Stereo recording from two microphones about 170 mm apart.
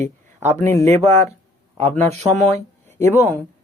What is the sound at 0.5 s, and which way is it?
Speech, 15° left (ahead or behind).